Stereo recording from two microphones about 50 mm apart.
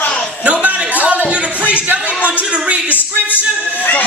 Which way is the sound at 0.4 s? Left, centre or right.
Right.